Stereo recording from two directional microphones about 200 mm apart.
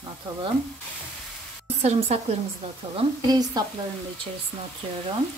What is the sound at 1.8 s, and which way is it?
Speech, 30° right (ahead or behind).